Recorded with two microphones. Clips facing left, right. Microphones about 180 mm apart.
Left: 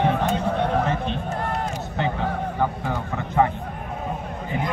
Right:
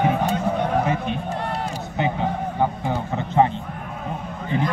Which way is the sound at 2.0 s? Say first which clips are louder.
Right 2 dB; 15° right (ahead or behind).